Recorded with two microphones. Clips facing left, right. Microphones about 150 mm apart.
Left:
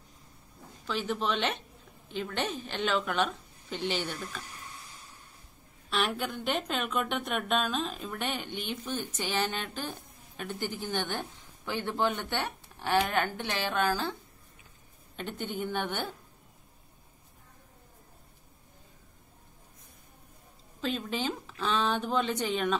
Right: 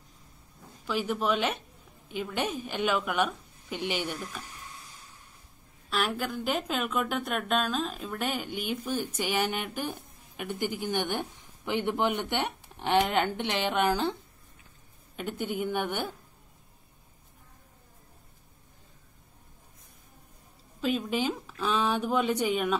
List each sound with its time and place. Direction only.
0.8 s a woman's voice: 10° right (ahead or behind)
5.9 s a woman's voice: centre (ahead or behind); by 14.1 s 20° right (ahead or behind)
15.1 s a woman's voice: 10° right (ahead or behind)
20.8 s a woman's voice: 10° right (ahead or behind)